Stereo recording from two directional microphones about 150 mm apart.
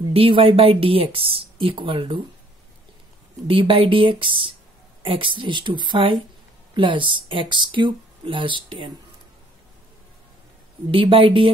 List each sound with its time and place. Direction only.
0.1 s speech: 40° right (ahead or behind)
3.4 s speech: 35° right (ahead or behind)
10.9 s speech: 35° right (ahead or behind)